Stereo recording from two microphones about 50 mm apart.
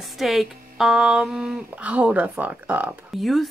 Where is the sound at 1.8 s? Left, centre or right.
Right.